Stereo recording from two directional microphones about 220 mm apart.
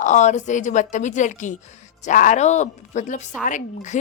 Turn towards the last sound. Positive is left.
turn(degrees=35)  # may be behind; listen again after turning